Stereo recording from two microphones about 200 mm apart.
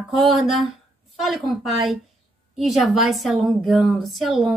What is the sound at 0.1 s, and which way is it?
A woman's voice, centre (ahead or behind).